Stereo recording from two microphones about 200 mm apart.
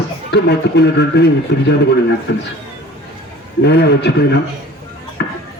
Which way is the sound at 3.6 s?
55° left (ahead or behind).